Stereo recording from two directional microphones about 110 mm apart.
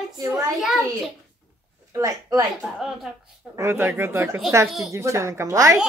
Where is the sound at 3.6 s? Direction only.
25° right (ahead or behind).